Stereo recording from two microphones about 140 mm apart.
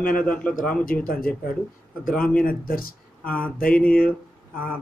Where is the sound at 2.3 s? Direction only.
90° left.